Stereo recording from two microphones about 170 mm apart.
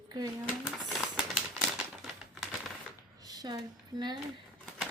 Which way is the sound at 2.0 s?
Centre (ahead or behind).